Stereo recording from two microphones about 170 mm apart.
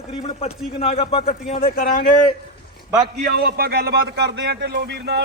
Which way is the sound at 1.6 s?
55° left (ahead or behind).